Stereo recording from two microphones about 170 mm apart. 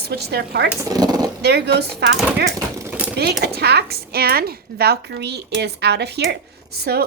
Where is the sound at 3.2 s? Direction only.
75° right (ahead or behind).